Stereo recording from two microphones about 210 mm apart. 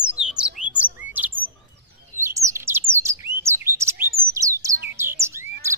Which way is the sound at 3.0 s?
10° right (ahead or behind).